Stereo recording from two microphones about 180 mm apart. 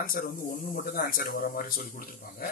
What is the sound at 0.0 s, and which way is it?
A man's voice, 55° left (ahead or behind).